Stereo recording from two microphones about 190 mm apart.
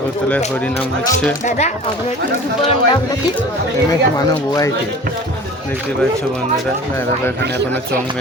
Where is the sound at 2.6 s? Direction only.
25° left (ahead or behind).